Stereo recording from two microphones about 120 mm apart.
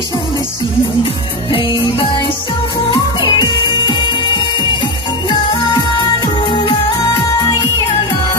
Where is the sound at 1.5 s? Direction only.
45° left (ahead or behind).